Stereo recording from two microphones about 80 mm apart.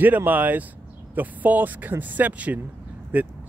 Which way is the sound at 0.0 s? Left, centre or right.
Right.